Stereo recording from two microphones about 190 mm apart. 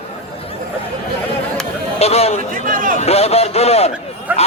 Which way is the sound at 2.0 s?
35° left (ahead or behind).